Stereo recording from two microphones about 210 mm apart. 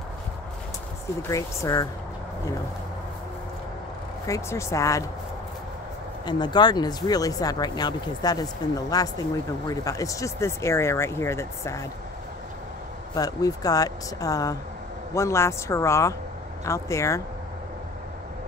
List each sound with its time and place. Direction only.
1.3 s speech: 15° left (ahead or behind)
4.3 s speech: 15° left (ahead or behind)
6.2 s speech: 20° left (ahead or behind)
13.1 s speech: 15° left (ahead or behind)